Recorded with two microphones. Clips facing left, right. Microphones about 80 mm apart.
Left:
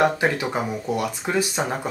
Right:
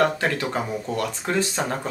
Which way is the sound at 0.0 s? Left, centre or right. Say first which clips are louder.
Left 2 dB; centre.